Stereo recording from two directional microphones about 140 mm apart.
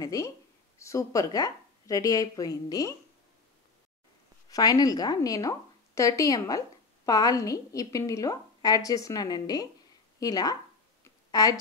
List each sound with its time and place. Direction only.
0.0 s a woman's voice: 25° left (ahead or behind)
4.5 s a woman's voice: 25° left (ahead or behind)
11.1 s a sound: 25° left (ahead or behind)